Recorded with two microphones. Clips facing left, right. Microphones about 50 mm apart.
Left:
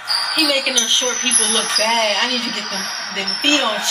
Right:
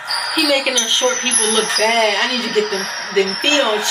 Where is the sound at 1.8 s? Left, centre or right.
Right.